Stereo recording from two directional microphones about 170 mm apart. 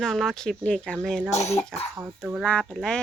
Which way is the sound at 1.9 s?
15° right (ahead or behind).